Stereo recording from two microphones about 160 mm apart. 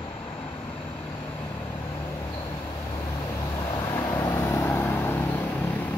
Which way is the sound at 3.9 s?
20° left (ahead or behind).